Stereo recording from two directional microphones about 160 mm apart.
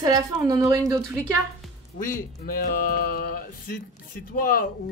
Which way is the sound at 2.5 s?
65° left (ahead or behind).